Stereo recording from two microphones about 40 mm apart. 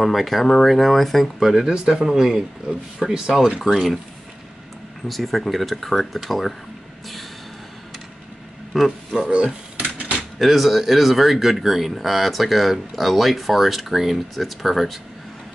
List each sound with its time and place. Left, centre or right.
0.0 s speech: centre
1.4 s a man's voice: centre
3.6 s speech: centre
5.0 s speech: centre
8.7 s speech: centre
9.9 s a sound: right
10.4 s speech: centre